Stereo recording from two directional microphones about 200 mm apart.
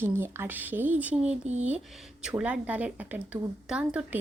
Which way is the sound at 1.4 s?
35° right (ahead or behind).